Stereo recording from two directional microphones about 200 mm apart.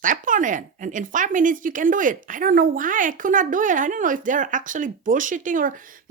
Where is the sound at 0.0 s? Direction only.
40° right (ahead or behind).